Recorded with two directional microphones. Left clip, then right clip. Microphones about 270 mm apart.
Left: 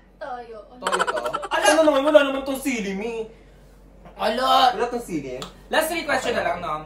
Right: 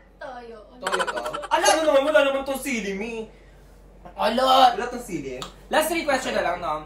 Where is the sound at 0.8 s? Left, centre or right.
Centre.